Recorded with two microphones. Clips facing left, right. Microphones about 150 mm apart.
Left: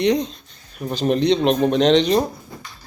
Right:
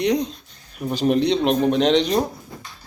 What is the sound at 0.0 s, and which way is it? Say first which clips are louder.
A man's voice: left 2 dB; 10° right (ahead or behind).